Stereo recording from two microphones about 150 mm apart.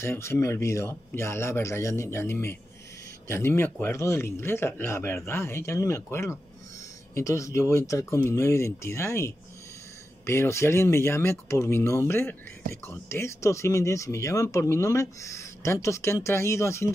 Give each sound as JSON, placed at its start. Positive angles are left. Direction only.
{"t": 0.0, "sound": "speech", "side_deg": 15}